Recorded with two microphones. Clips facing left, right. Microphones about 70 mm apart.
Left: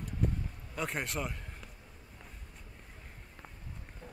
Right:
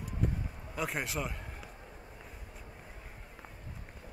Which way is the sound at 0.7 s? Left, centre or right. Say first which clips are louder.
Right 1 dB; centre.